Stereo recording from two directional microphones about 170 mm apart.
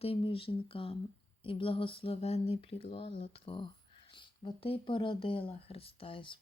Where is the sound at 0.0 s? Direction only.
35° left (ahead or behind).